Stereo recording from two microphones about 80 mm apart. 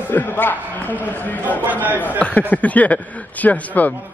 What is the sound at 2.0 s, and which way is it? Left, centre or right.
Speech, centre.